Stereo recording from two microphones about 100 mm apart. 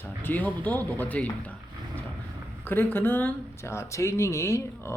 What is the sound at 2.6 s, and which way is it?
Speech, 20° left (ahead or behind).